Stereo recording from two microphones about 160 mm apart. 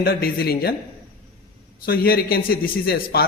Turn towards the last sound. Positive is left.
turn(degrees=75)  # may be behind; listen again after turning